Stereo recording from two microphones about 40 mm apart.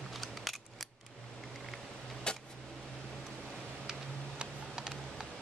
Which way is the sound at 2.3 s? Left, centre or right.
Left.